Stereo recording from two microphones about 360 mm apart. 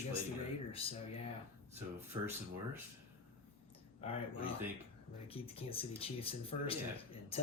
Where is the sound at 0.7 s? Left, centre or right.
Centre.